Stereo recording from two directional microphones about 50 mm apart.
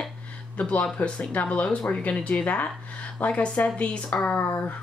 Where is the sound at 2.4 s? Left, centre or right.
Left.